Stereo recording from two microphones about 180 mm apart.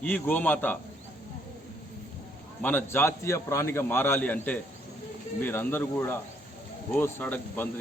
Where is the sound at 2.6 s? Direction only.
10° left (ahead or behind).